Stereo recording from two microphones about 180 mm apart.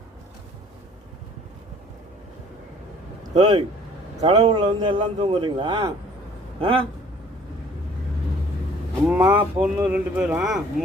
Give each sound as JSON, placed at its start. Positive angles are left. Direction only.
{"t": 3.3, "sound": "a man's voice", "side_deg": -40}
{"t": 9.0, "sound": "speech", "side_deg": -10}